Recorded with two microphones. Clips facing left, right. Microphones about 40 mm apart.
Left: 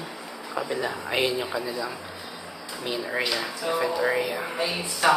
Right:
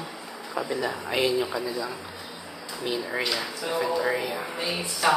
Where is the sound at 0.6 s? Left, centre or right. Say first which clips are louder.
Even; left.